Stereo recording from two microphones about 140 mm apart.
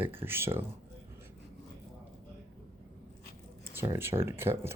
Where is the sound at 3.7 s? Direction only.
20° right (ahead or behind).